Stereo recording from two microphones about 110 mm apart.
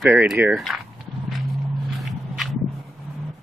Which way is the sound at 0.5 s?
Centre (ahead or behind).